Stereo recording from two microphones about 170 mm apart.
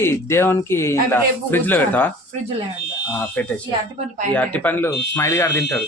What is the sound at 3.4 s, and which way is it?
Speech, 5° left (ahead or behind).